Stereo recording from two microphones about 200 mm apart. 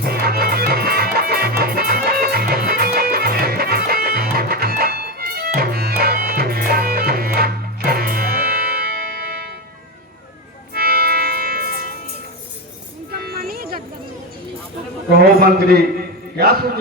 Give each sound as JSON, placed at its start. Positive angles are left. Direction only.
{"t": 0.0, "sound": "music", "side_deg": -50}
{"t": 10.8, "sound": "music", "side_deg": -50}
{"t": 13.2, "sound": "music", "side_deg": -50}
{"t": 15.2, "sound": "a sound", "side_deg": -50}